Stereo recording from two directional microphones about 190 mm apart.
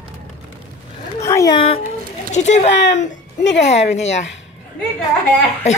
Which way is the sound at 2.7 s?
65° left (ahead or behind).